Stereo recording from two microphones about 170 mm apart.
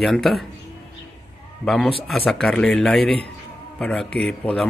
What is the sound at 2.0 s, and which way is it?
Speech, 5° left (ahead or behind).